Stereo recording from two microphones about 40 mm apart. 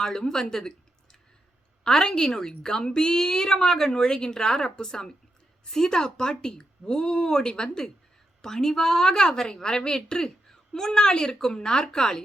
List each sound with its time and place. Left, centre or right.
0.0 s a woman's voice: centre
1.8 s a woman's voice: centre